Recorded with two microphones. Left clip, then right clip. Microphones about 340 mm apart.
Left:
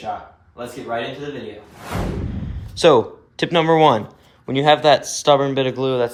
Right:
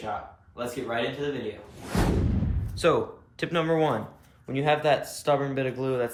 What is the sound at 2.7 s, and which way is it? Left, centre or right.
Speech, centre.